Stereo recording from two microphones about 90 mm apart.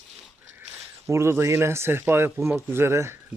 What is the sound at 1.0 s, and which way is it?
Speech, 30° right (ahead or behind).